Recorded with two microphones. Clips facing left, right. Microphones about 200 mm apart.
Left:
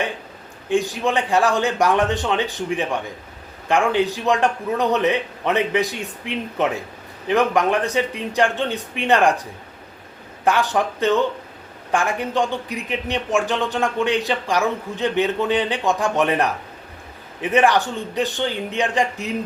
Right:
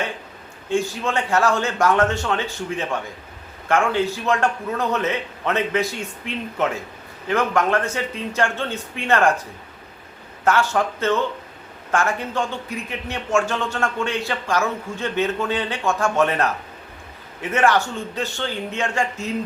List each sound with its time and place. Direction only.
0.7 s a man's voice: 15° left (ahead or behind)